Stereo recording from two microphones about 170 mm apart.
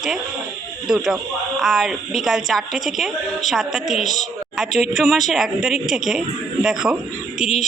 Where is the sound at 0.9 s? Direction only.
5° right (ahead or behind).